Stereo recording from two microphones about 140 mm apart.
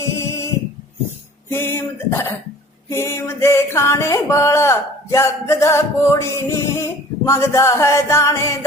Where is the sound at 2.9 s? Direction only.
20° left (ahead or behind).